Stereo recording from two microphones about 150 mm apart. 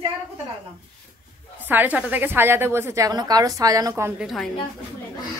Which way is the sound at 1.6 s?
10° right (ahead or behind).